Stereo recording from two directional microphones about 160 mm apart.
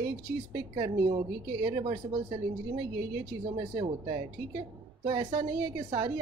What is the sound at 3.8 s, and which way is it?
A woman's voice, 25° right (ahead or behind).